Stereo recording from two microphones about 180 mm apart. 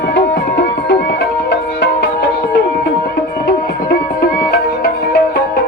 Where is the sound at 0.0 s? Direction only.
70° left (ahead or behind).